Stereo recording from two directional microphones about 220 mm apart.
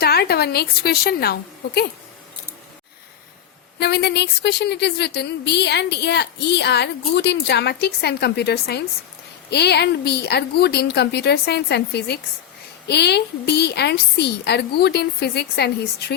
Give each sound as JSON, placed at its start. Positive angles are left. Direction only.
{"t": 0.0, "sound": "speech", "side_deg": 45}
{"t": 3.8, "sound": "speech", "side_deg": 50}